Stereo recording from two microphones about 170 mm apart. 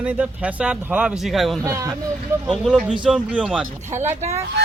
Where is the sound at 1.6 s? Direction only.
15° right (ahead or behind).